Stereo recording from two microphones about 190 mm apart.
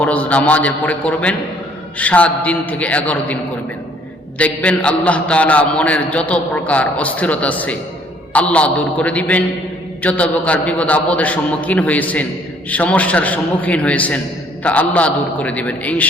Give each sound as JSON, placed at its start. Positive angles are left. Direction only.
{"t": 0.0, "sound": "a man's voice", "side_deg": 5}
{"t": 4.4, "sound": "a man's voice", "side_deg": 5}